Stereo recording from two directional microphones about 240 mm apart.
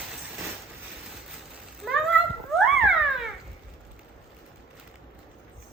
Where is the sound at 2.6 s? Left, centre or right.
Centre.